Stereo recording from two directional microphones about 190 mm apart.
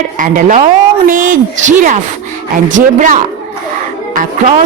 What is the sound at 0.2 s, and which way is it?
Speech, 45° right (ahead or behind).